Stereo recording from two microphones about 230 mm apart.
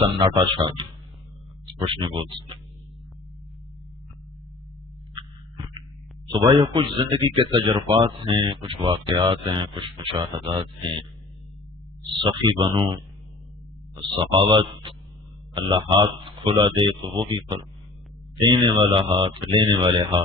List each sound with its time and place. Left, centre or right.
0.0 s speech: centre
1.9 s speech: right
5.1 s a sound: centre
6.3 s speech: right
12.0 s speech: right